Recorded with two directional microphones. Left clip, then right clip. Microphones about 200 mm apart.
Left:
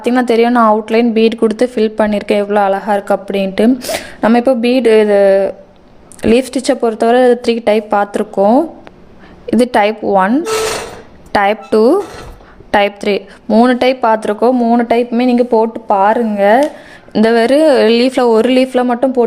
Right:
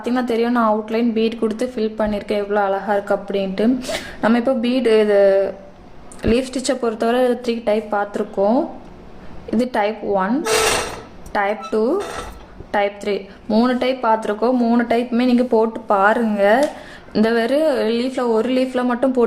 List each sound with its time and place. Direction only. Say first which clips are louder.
0.0 s a woman's voice: left 9 dB; 40° left (ahead or behind)